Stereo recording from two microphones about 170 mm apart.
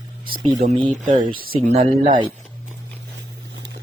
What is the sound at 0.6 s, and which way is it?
Speech, 55° right (ahead or behind).